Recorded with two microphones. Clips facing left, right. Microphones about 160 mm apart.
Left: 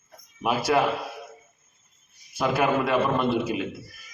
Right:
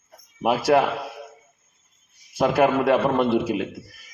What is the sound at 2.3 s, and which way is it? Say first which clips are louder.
A man's voice: right 4 dB; 70° right (ahead or behind).